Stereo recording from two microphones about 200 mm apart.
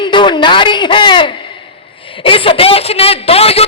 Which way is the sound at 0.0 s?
25° left (ahead or behind).